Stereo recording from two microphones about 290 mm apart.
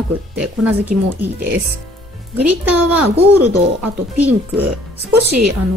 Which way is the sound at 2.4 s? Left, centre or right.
Centre.